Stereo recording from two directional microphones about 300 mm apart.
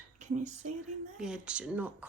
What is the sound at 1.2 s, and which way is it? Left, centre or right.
Speech, centre.